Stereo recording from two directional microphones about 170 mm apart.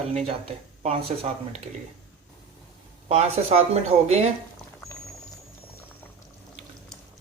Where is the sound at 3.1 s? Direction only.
35° right (ahead or behind).